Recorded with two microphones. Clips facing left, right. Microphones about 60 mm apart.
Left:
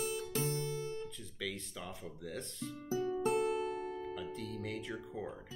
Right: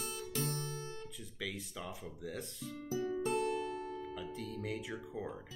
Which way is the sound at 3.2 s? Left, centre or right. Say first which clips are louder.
Left 3 dB; left.